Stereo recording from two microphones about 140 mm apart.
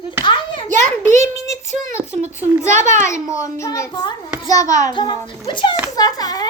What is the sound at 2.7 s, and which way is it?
Speech, 60° right (ahead or behind).